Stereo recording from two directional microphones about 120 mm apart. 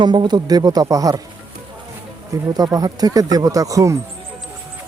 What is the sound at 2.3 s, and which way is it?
Speech, 30° right (ahead or behind).